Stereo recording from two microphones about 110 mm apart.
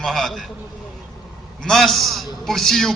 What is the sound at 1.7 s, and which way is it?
A man's voice, 5° left (ahead or behind).